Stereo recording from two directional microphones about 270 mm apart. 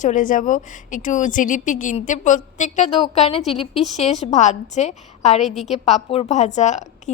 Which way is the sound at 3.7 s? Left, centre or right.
Centre.